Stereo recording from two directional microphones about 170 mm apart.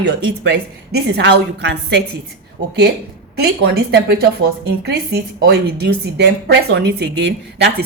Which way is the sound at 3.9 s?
65° right (ahead or behind).